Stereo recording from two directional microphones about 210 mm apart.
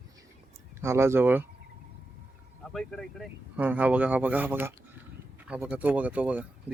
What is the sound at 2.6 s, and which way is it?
Speech, centre (ahead or behind).